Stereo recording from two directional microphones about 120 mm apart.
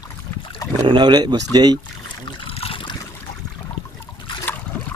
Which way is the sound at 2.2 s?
45° left (ahead or behind).